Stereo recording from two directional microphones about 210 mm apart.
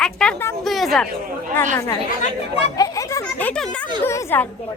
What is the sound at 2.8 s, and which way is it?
A woman's voice, 15° left (ahead or behind).